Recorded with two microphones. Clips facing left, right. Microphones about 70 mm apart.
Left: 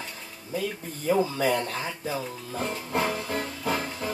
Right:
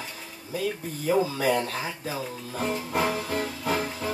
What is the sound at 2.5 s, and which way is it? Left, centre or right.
Music, centre.